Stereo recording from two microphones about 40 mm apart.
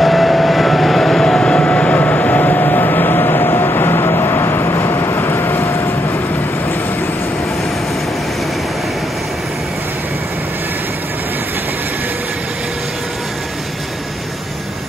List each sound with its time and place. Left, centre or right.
0.0 s vehicle: centre
1.2 s vehicle: left